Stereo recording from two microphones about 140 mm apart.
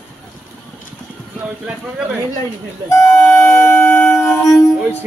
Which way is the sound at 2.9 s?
20° left (ahead or behind).